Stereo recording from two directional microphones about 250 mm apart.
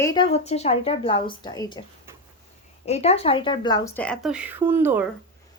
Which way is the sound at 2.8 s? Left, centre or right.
Left.